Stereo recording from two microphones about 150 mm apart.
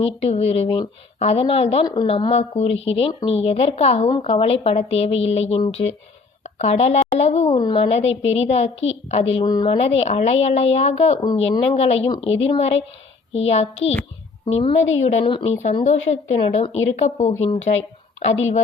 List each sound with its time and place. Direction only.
0.0 s a woman's voice: 40° left (ahead or behind)
9.4 s a woman's voice: 30° left (ahead or behind)
9.7 s a woman's voice: 45° left (ahead or behind)
15.3 s a woman's voice: 35° left (ahead or behind)
15.8 s a woman's voice: 50° left (ahead or behind)